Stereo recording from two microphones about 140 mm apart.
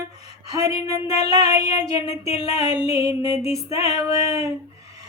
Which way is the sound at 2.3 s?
45° left (ahead or behind).